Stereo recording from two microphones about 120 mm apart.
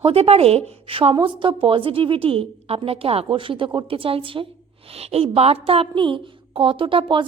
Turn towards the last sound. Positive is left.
turn(degrees=-45)  # may be behind; listen again after turning